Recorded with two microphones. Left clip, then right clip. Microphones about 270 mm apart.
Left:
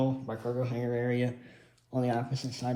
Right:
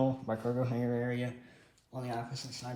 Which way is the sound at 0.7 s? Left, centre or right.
Right.